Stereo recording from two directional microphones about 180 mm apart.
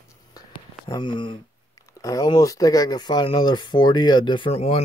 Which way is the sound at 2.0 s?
20° left (ahead or behind).